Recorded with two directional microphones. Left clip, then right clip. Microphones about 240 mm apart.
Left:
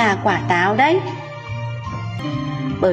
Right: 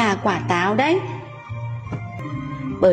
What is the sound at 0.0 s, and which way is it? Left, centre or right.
Speech, right.